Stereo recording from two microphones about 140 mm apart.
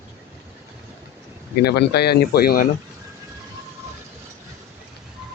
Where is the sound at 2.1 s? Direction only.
90° left.